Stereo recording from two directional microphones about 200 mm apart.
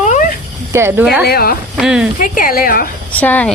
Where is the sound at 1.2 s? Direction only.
50° left (ahead or behind).